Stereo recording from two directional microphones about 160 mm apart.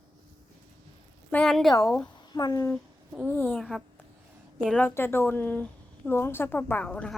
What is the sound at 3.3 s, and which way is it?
Speech, 10° left (ahead or behind).